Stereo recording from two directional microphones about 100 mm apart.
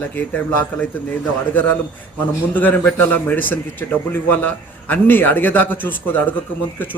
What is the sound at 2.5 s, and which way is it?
Speech, 20° left (ahead or behind).